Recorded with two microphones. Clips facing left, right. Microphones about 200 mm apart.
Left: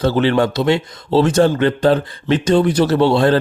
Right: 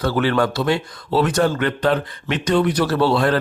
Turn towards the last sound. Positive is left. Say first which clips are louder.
# left 4 dB
turn(degrees=25)  # may be behind; listen again after turning